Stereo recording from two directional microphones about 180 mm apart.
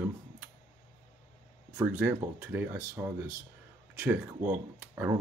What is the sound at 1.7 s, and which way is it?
Speech, 10° right (ahead or behind).